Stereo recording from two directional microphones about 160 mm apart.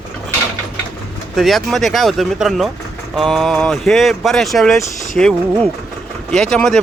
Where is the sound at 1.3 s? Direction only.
Centre (ahead or behind).